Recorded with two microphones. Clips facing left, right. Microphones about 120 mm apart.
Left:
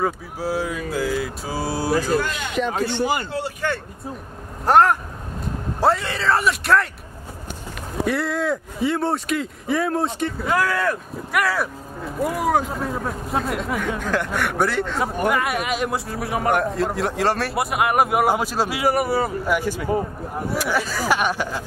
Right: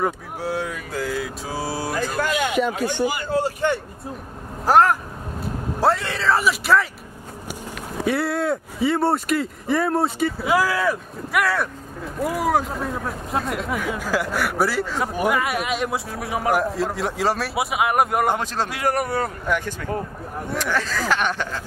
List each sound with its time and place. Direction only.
0.0 s speech: centre (ahead or behind)
2.2 s speech: 50° right (ahead or behind)
3.6 s vehicle: 20° right (ahead or behind)
4.6 s speech: centre (ahead or behind)
8.0 s speech: centre (ahead or behind)